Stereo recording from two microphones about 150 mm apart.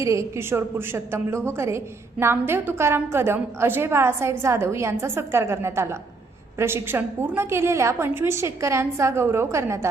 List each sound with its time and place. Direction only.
0.0 s a woman's voice: 20° right (ahead or behind)